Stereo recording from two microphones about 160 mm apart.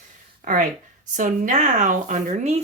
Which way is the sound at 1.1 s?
50° right (ahead or behind).